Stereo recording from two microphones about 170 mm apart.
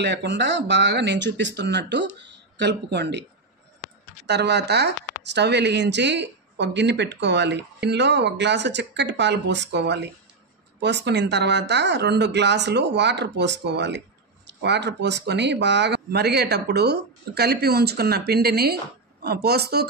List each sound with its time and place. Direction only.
0.0 s speech: 85° right
4.3 s speech: 85° right